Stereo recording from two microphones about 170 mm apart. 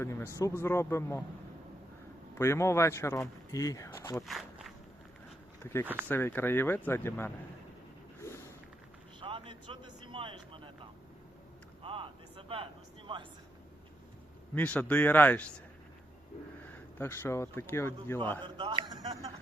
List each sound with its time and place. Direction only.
0.0 s speech: 15° left (ahead or behind)
2.4 s speech: 15° left (ahead or behind)
4.3 s walk: centre (ahead or behind)
5.8 s speech: 10° right (ahead or behind)
6.1 s speech: 10° left (ahead or behind)
9.2 s a sound: 30° right (ahead or behind)
10.1 s vehicle: 30° right (ahead or behind)
11.8 s a sound: 30° right (ahead or behind)
14.5 s speech: 10° left (ahead or behind)
16.6 s speech: 15° left (ahead or behind)
18.4 s speech: 25° right (ahead or behind)